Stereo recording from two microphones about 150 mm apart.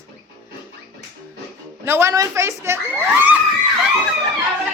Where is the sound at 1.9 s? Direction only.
20° right (ahead or behind).